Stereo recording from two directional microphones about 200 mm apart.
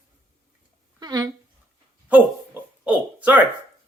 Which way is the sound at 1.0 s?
20° right (ahead or behind).